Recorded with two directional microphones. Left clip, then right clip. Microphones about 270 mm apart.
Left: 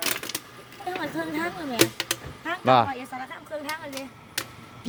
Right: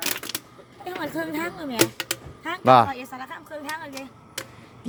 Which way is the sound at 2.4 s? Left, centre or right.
Centre.